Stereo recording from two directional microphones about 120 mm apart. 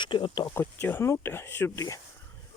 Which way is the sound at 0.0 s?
40° left (ahead or behind).